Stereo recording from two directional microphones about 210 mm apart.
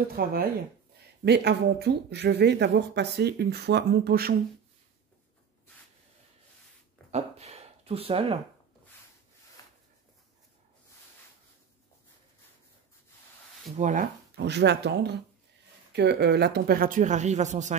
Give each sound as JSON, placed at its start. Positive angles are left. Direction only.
{"t": 0.1, "sound": "speech", "side_deg": -45}
{"t": 7.1, "sound": "a sound", "side_deg": -30}
{"t": 13.7, "sound": "speech", "side_deg": -40}